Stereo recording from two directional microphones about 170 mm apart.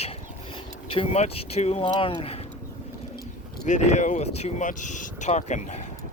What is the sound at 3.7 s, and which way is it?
Speech, 45° left (ahead or behind).